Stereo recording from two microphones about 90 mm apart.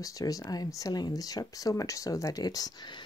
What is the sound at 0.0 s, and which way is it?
Speech, 40° left (ahead or behind).